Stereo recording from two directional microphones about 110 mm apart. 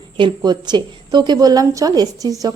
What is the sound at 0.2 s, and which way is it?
A woman's voice, 45° right (ahead or behind).